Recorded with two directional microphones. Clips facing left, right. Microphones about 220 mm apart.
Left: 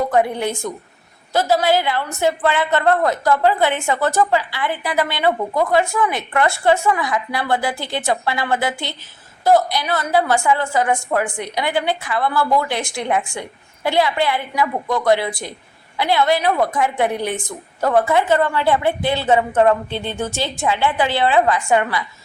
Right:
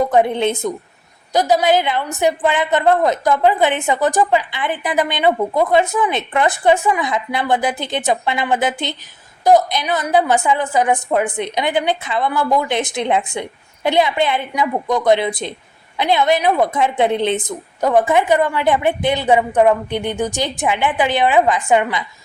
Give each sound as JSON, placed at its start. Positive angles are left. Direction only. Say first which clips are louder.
{"t": 0.0, "sound": "a woman's voice", "louder": "right 3 dB", "side_deg": -20}